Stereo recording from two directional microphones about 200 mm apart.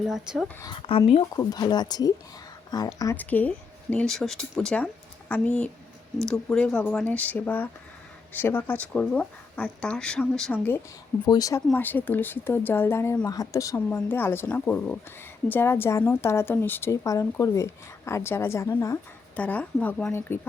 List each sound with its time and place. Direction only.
0.1 s speech: centre (ahead or behind)
0.6 s speech: 25° left (ahead or behind)